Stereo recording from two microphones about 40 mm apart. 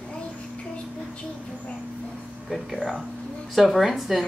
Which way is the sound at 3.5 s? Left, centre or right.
Centre.